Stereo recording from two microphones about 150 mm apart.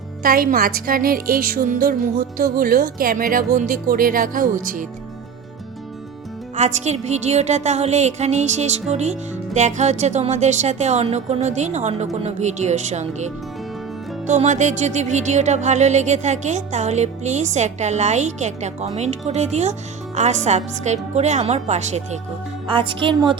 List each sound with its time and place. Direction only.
0.2 s a woman's voice: 75° right (ahead or behind)
6.6 s music: 50° right (ahead or behind)
22.7 s speech: 35° right (ahead or behind)